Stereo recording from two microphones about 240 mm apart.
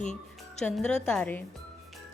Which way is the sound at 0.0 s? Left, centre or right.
Left.